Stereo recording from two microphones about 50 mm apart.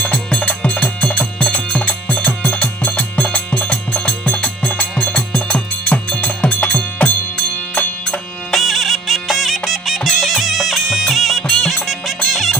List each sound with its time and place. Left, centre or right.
0.0 s music: left
8.4 s music: centre